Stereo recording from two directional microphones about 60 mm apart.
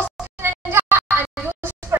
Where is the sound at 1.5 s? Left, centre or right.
Right.